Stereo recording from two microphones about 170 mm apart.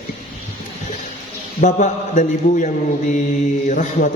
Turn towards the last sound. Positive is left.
turn(degrees=45)  # may be behind; listen again after turning